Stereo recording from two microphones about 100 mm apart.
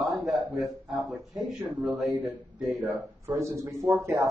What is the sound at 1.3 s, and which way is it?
Speech, 15° right (ahead or behind).